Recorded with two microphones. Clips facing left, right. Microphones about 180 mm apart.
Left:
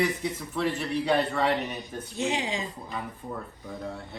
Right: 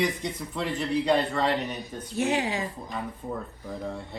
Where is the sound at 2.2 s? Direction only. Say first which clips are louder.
Right 3 dB; 20° left (ahead or behind).